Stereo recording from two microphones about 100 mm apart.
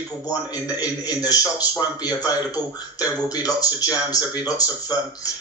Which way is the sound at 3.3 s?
40° left (ahead or behind).